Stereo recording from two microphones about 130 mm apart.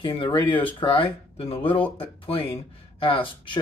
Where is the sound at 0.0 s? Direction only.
40° left (ahead or behind).